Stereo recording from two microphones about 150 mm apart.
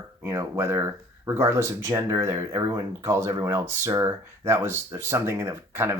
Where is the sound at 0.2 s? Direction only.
20° right (ahead or behind).